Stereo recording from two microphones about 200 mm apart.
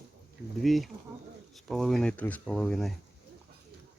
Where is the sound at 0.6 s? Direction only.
Centre (ahead or behind).